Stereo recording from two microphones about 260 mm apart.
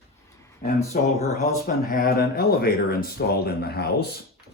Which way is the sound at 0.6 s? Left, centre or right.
Left.